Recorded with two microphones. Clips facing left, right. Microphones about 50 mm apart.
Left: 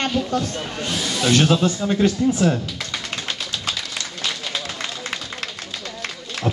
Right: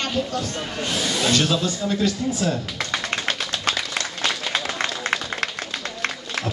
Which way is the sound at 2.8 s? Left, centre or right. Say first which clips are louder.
Right 3 dB; right.